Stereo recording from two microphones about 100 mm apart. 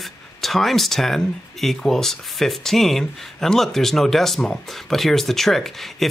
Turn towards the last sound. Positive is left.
turn(degrees=0)  # may be behind; listen again after turning